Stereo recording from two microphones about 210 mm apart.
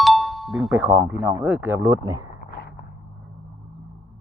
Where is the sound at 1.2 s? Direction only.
10° right (ahead or behind).